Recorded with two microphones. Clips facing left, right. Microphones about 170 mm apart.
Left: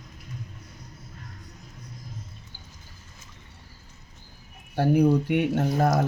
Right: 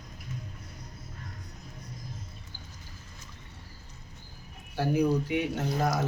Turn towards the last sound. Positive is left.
turn(degrees=60)  # may be behind; listen again after turning